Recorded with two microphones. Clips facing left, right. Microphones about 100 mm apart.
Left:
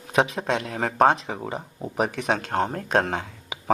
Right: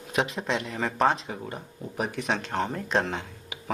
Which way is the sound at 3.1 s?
85° left.